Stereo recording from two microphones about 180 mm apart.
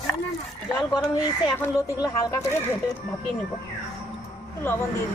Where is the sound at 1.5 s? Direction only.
15° left (ahead or behind).